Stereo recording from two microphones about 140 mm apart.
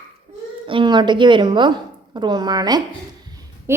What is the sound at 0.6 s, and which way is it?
A woman's voice, 35° right (ahead or behind).